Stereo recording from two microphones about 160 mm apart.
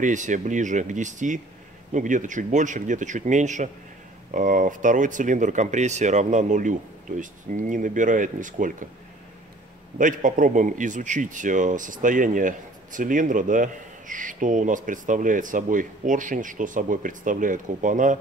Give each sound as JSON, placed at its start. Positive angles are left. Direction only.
{"t": 0.0, "sound": "speech", "side_deg": -50}
{"t": 9.9, "sound": "a man's voice", "side_deg": -55}